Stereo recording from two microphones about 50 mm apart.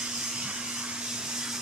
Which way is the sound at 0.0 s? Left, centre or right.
Centre.